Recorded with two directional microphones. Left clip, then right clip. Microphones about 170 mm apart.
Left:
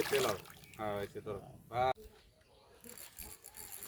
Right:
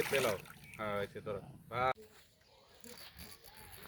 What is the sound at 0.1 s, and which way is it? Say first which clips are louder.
Speech: even; 15° left (ahead or behind).